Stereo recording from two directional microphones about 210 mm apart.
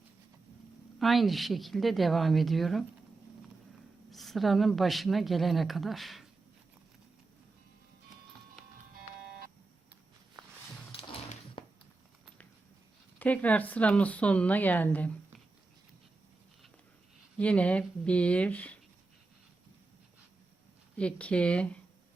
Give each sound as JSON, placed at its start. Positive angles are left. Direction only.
{"t": 0.9, "sound": "a woman's voice", "side_deg": 0}
{"t": 4.1, "sound": "a woman's voice", "side_deg": 0}
{"t": 10.9, "sound": "music", "side_deg": 25}
{"t": 13.1, "sound": "speech", "side_deg": 5}
{"t": 17.3, "sound": "a woman's voice", "side_deg": 5}
{"t": 21.0, "sound": "a woman's voice", "side_deg": 5}